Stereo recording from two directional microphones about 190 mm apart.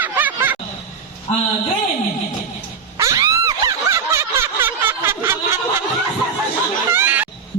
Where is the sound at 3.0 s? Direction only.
15° right (ahead or behind).